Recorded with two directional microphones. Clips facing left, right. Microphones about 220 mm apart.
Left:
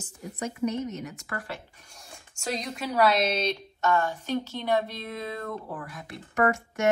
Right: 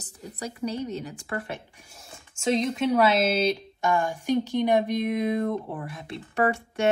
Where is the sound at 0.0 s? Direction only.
35° right (ahead or behind).